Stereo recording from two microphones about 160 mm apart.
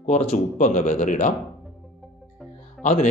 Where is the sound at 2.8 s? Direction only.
50° left (ahead or behind).